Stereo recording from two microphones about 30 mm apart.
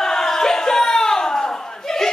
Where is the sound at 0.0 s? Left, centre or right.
Centre.